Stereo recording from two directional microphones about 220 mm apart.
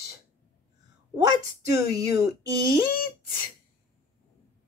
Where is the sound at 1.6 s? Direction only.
15° right (ahead or behind).